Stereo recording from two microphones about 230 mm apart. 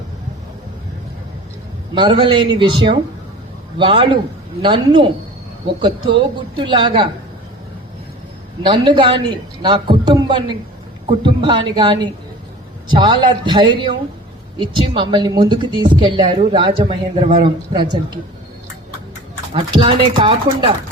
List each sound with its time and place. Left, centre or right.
2.0 s a woman's voice: right
6.1 s a woman's voice: right
8.6 s a woman's voice: centre
19.5 s a woman's voice: right